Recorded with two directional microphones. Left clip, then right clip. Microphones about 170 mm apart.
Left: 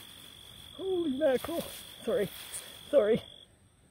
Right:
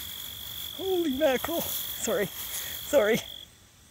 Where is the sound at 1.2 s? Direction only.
5° right (ahead or behind).